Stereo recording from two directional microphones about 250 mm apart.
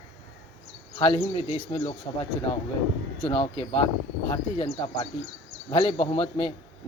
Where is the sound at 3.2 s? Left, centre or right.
Left.